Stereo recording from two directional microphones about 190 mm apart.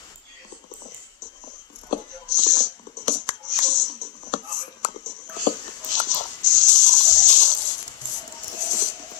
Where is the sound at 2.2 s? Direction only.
40° left (ahead or behind).